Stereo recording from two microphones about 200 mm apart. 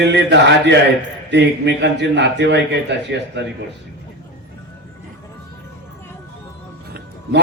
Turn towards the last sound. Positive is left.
turn(degrees=-55)  # may be behind; listen again after turning